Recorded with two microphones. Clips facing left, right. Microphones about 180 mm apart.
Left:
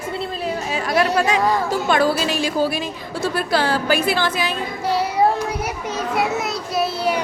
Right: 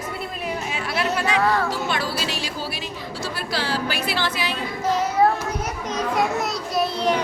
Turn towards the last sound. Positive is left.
turn(degrees=5)  # may be behind; listen again after turning